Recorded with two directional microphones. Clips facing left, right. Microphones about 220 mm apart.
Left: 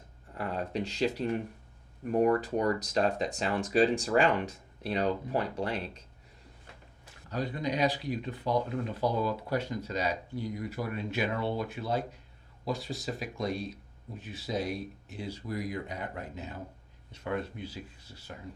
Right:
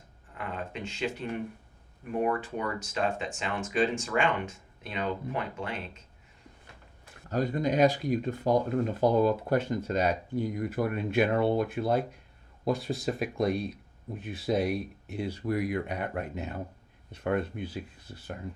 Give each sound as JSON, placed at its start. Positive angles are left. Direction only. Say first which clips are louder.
{"t": 0.3, "sound": "a sound", "louder": "left 4 dB", "side_deg": 35}
{"t": 2.1, "sound": "speech", "louder": "left 4 dB", "side_deg": 40}
{"t": 7.0, "sound": "speech", "louder": "right 5 dB", "side_deg": -45}